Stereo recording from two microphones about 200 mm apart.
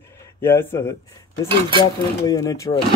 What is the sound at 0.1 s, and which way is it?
Speech, 10° left (ahead or behind).